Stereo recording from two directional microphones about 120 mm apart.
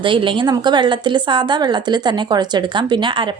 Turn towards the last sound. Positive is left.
turn(degrees=-45)  # may be behind; listen again after turning